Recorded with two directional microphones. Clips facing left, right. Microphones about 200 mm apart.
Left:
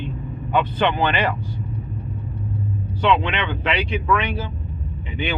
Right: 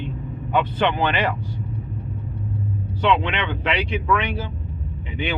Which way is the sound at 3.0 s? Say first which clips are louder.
Left 1 dB; 15° right (ahead or behind).